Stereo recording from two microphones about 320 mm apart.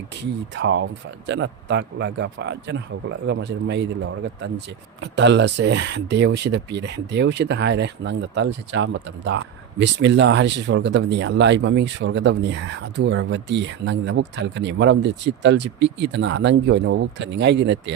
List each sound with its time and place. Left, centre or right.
0.2 s speech: right